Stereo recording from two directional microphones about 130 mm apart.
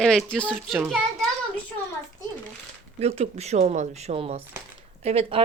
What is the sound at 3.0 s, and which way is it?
Speech, 55° right (ahead or behind).